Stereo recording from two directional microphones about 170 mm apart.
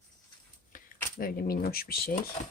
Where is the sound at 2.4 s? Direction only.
35° left (ahead or behind).